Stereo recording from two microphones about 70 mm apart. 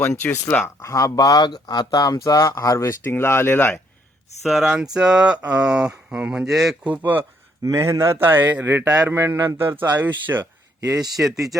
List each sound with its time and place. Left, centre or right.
0.0 s speech: left
0.8 s speech: left
4.4 s speech: centre
6.8 s a man's voice: right
7.6 s a man's voice: right
10.8 s a man's voice: right